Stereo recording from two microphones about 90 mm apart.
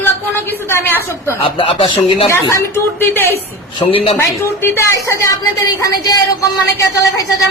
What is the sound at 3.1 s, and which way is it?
Speech, 25° left (ahead or behind).